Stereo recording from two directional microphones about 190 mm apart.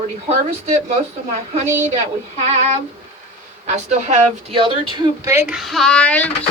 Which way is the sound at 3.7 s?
35° right (ahead or behind).